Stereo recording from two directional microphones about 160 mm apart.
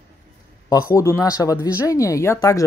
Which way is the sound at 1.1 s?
20° left (ahead or behind).